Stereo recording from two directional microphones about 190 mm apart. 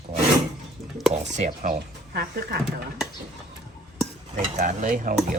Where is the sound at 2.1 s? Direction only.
55° right (ahead or behind).